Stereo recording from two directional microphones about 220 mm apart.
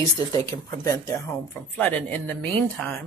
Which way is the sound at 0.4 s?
10° left (ahead or behind).